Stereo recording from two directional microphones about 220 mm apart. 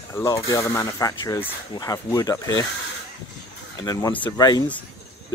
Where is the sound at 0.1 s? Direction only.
15° left (ahead or behind).